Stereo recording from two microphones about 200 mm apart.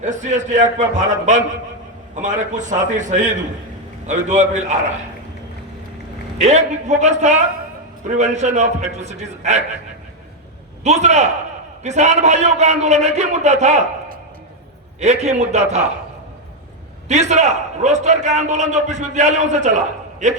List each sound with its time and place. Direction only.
0.0 s a man's voice: 35° right (ahead or behind)
6.4 s a man's voice: 35° right (ahead or behind)
10.8 s a man's voice: 35° right (ahead or behind)
15.0 s a man's voice: 35° right (ahead or behind)
17.1 s a man's voice: 35° right (ahead or behind)